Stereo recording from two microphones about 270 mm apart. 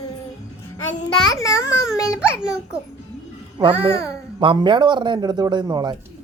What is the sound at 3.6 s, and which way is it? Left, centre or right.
A child's voice, centre.